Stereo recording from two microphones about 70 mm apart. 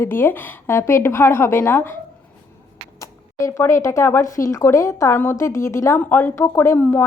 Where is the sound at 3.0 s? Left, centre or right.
Left.